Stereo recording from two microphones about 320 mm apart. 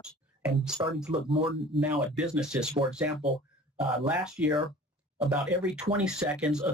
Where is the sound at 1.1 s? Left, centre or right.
Centre.